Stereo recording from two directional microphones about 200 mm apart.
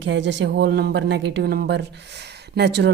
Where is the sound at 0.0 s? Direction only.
65° right (ahead or behind).